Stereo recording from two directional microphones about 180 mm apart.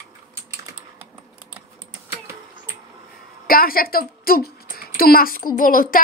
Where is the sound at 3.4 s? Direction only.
55° left (ahead or behind).